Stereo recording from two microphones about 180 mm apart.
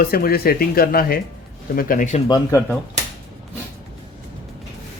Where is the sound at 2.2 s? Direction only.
20° left (ahead or behind).